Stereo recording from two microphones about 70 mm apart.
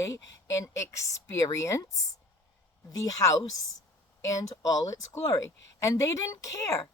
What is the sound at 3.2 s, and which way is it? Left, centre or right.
Speech, left.